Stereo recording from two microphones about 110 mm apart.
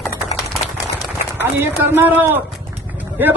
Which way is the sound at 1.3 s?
20° right (ahead or behind).